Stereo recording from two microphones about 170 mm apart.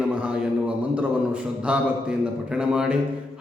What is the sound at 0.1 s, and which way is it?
Mantra, 10° right (ahead or behind).